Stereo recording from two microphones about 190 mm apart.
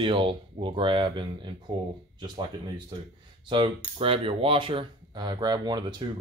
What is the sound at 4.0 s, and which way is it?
Speech, 30° right (ahead or behind).